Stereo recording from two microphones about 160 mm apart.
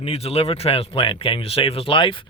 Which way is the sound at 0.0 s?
40° left (ahead or behind).